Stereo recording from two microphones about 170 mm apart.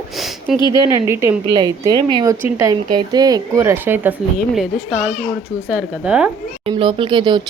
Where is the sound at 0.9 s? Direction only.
15° right (ahead or behind).